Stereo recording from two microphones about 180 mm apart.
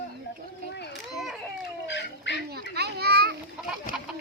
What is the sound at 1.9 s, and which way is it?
Dog, 75° left (ahead or behind).